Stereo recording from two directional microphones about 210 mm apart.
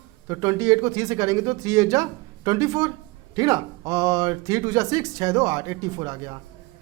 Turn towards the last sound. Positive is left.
turn(degrees=-20)  # may be behind; listen again after turning